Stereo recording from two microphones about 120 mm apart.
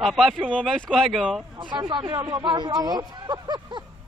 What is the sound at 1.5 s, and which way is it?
Speech, 40° right (ahead or behind).